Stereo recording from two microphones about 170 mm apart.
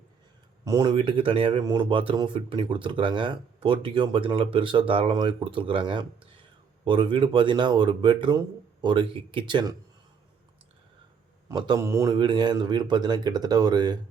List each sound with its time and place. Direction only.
0.6 s speech: 20° right (ahead or behind)
11.4 s speech: 25° right (ahead or behind)